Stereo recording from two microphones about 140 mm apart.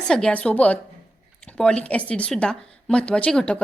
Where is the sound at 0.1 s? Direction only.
5° left (ahead or behind).